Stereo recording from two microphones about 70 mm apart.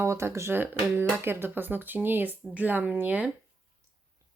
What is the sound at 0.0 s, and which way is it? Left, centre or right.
Speech, right.